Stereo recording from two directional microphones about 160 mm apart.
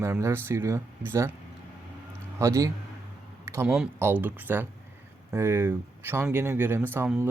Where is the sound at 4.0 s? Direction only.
15° right (ahead or behind).